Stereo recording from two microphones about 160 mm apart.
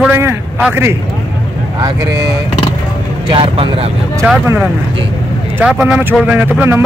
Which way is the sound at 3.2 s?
35° right (ahead or behind).